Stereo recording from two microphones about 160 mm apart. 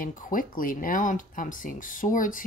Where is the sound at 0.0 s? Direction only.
60° left (ahead or behind).